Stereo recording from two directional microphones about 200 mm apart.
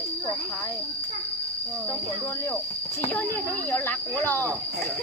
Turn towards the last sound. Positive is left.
turn(degrees=10)  # may be behind; listen again after turning